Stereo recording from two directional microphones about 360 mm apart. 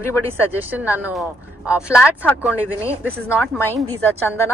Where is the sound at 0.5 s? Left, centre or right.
Centre.